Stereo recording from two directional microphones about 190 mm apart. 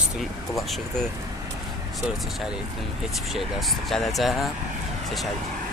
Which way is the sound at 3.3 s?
Centre (ahead or behind).